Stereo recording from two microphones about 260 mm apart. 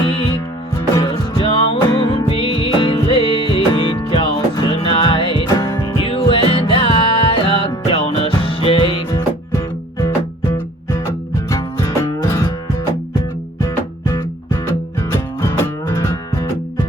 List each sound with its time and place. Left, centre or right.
0.9 s music: centre
13.6 s music: centre